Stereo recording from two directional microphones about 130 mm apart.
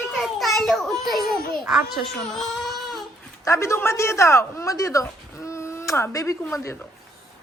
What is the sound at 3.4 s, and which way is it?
Speech, 20° left (ahead or behind).